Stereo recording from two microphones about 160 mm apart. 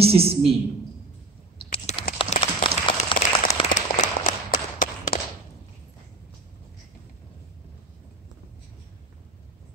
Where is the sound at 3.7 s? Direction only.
55° left (ahead or behind).